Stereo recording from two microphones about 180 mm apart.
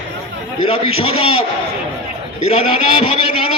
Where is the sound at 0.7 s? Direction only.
30° left (ahead or behind).